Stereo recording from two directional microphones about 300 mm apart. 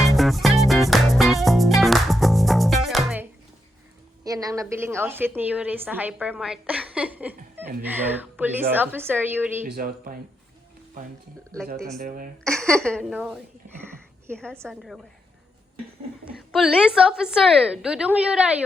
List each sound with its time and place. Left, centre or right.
0.2 s music: centre
4.2 s a woman's voice: centre
9.6 s speech: right
11.9 s speech: right
12.5 s a woman's voice: centre
13.8 s a sound: centre
14.3 s a woman's voice: centre
16.2 s a woman's voice: centre